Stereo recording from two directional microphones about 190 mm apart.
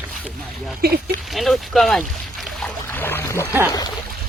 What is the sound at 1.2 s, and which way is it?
Boat, centre (ahead or behind).